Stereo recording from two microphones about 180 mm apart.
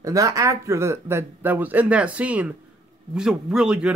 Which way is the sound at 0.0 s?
20° right (ahead or behind).